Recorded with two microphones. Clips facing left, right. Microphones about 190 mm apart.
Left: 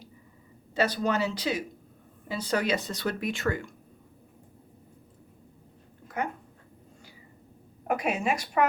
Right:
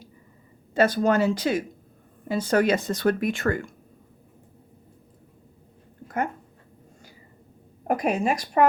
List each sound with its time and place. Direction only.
0.7 s speech: 50° right (ahead or behind)
7.9 s a woman's voice: 40° right (ahead or behind)